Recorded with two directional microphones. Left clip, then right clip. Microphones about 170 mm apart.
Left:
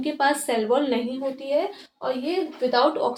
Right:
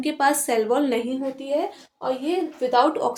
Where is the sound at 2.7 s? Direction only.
45° right (ahead or behind).